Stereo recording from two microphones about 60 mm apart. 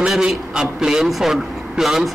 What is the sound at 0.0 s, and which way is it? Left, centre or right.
A man's voice, centre.